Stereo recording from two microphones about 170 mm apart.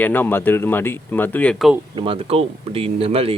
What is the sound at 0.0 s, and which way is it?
Speech, 10° left (ahead or behind).